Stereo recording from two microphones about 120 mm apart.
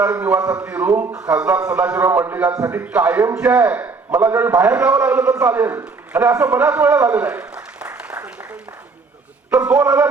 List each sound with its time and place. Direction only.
0.0 s a man's voice: 10° right (ahead or behind)
0.3 s a man's voice: 30° right (ahead or behind)
0.6 s a man's voice: 15° right (ahead or behind)
2.5 s a man's voice: 30° right (ahead or behind)
2.8 s a man's voice: 15° right (ahead or behind)
7.1 s a sound: 15° right (ahead or behind)
9.5 s a man's voice: 10° right (ahead or behind)